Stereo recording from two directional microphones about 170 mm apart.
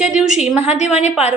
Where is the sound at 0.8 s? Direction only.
40° left (ahead or behind).